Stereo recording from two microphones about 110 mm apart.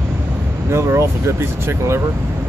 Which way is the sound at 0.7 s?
25° right (ahead or behind).